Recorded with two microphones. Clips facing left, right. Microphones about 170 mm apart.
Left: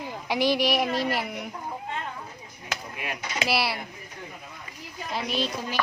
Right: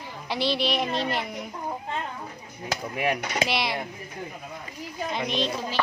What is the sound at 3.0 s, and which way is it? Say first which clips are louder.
Speech: right 13 dB; 60° right (ahead or behind).